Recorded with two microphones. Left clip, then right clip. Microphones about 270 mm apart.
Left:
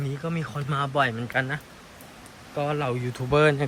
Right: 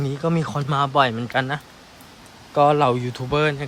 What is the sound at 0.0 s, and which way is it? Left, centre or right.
Speech, centre.